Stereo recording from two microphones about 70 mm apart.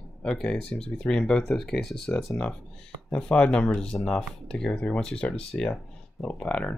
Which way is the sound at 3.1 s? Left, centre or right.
Centre.